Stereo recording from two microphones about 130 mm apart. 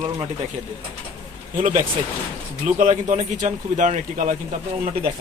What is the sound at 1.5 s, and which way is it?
Speech, 85° right.